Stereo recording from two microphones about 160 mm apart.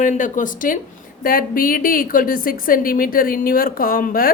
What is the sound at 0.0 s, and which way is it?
A woman's voice, 50° left (ahead or behind).